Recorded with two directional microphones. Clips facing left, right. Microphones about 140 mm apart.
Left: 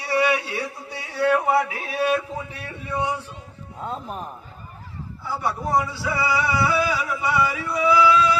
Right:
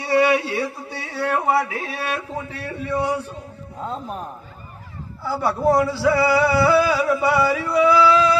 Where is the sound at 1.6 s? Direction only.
35° right (ahead or behind).